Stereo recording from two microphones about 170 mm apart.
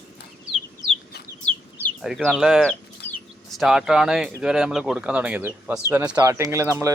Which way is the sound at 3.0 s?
10° left (ahead or behind).